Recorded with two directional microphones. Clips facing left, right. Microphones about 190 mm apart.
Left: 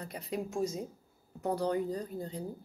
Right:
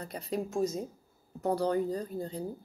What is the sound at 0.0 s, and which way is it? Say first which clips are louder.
Speech: right 3 dB; 35° right (ahead or behind).